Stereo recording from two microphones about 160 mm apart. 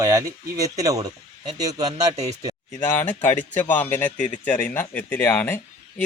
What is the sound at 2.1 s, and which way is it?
Speech, 45° right (ahead or behind).